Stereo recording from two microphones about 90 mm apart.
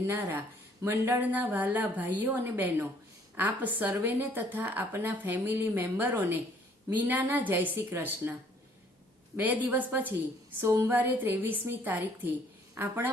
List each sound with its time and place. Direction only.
0.1 s speech: 20° right (ahead or behind)